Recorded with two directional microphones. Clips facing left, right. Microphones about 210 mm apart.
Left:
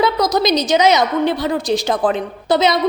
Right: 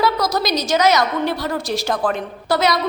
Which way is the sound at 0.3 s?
20° left (ahead or behind).